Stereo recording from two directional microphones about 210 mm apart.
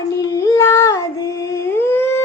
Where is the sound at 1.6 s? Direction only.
10° left (ahead or behind).